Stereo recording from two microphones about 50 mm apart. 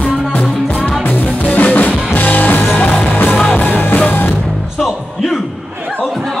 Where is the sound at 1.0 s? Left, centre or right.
Left.